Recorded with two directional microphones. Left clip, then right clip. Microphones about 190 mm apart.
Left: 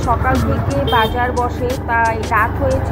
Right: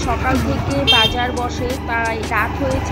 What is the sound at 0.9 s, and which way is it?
Speech, 15° right (ahead or behind).